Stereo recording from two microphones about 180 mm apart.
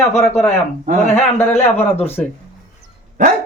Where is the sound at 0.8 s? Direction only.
40° right (ahead or behind).